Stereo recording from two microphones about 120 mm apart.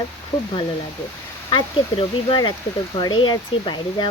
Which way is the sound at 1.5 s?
45° left (ahead or behind).